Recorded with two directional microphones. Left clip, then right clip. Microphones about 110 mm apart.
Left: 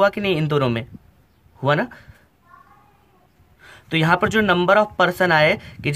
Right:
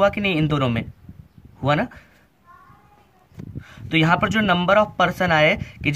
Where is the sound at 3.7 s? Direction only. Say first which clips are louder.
Even; 30° left (ahead or behind).